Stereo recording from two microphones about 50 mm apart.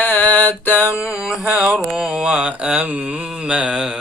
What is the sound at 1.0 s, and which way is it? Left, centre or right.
Mantra, centre.